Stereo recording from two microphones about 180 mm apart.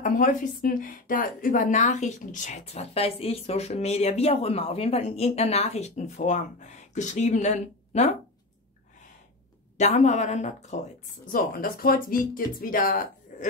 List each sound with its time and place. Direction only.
0.0 s speech: 45° left (ahead or behind)
9.8 s speech: 40° left (ahead or behind)
11.3 s speech: 55° left (ahead or behind)